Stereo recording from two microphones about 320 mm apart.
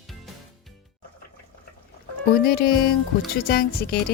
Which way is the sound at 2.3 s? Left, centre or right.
Left.